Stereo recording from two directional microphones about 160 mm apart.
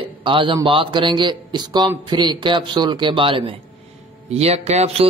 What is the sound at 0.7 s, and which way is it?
A man's voice, 30° right (ahead or behind).